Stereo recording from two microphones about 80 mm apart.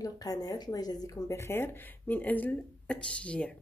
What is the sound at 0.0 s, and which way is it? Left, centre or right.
Speech, left.